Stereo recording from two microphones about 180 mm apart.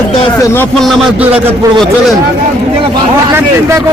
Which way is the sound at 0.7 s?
Centre (ahead or behind).